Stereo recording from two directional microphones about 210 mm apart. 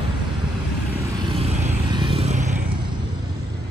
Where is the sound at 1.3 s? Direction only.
25° right (ahead or behind).